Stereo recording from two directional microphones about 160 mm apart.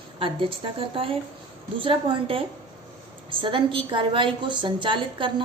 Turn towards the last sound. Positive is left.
turn(degrees=-30)  # may be behind; listen again after turning